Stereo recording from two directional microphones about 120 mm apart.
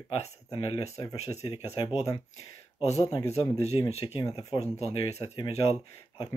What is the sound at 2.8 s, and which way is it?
Speech, 60° left (ahead or behind).